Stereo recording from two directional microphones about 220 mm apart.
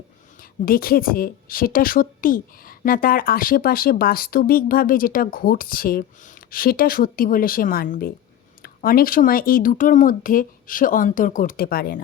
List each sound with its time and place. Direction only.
0.6 s a woman's voice: 40° left (ahead or behind)